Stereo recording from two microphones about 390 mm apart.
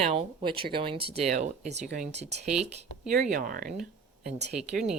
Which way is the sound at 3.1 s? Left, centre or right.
Right.